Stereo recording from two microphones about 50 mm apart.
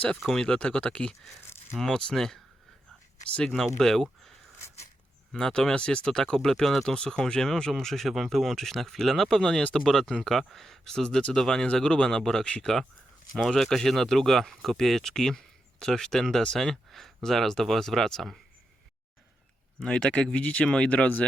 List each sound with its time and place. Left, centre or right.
0.4 s speech: centre
3.5 s speech: centre
5.3 s speech: centre
19.8 s speech: centre